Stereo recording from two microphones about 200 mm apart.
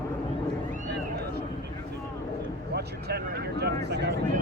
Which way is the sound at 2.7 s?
55° right (ahead or behind).